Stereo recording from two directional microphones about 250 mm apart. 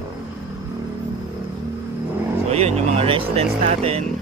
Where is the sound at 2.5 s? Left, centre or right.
Right.